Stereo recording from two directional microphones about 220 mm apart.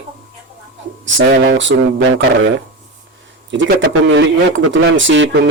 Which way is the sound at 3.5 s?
55° right (ahead or behind).